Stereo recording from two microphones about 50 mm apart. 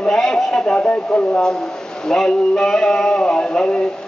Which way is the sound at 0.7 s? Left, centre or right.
Left.